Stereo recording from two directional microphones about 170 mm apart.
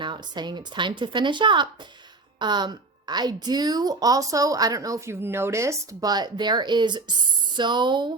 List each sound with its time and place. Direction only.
0.0 s a woman's voice: 25° right (ahead or behind)